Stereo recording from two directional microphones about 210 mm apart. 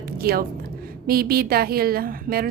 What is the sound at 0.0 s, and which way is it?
A woman's voice, 45° right (ahead or behind).